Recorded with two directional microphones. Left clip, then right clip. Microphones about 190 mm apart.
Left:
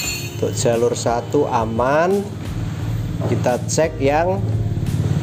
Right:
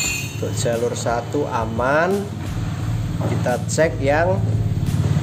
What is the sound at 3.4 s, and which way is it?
Speech, 30° left (ahead or behind).